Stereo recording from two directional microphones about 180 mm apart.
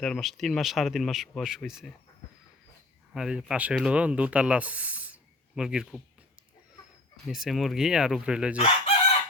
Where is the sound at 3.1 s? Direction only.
5° right (ahead or behind).